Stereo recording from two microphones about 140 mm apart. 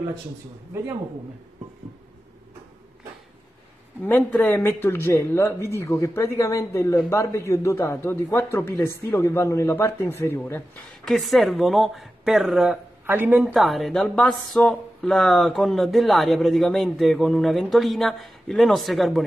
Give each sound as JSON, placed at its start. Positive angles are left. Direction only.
{"t": 4.0, "sound": "speech", "side_deg": 10}
{"t": 11.1, "sound": "speech", "side_deg": 0}
{"t": 13.0, "sound": "a woman's voice", "side_deg": -15}
{"t": 13.6, "sound": "speech", "side_deg": 0}